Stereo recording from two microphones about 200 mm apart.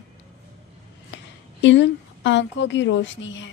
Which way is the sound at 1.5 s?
65° left (ahead or behind).